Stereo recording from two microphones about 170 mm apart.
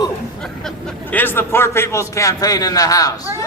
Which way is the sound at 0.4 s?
5° left (ahead or behind).